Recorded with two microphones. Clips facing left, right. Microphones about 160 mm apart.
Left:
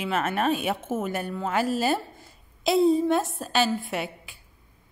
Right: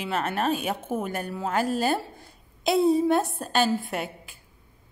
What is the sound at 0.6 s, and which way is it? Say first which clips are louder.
A woman's voice: left 1 dB; 5° left (ahead or behind).